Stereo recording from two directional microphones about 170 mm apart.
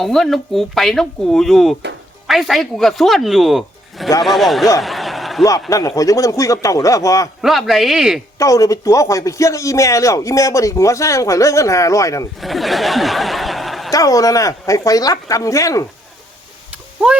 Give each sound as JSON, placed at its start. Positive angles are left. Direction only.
{"t": 0.0, "sound": "speech", "side_deg": 0}
{"t": 4.8, "sound": "a sound", "side_deg": 0}
{"t": 5.4, "sound": "speech", "side_deg": 20}
{"t": 7.4, "sound": "speech", "side_deg": 0}
{"t": 8.4, "sound": "speech", "side_deg": 20}
{"t": 12.4, "sound": "speech", "side_deg": 0}
{"t": 13.9, "sound": "speech", "side_deg": 20}